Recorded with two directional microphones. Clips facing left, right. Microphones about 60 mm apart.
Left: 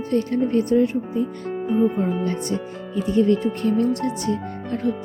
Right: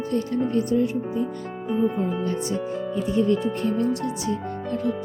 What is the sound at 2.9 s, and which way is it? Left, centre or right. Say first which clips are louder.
Speech: left 4 dB; left.